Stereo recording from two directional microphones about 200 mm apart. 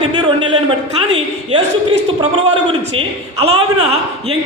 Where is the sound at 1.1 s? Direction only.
30° right (ahead or behind).